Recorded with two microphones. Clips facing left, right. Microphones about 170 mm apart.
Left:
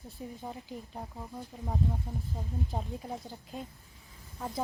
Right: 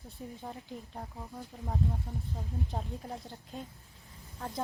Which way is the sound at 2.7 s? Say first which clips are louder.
Left 2 dB; centre (ahead or behind).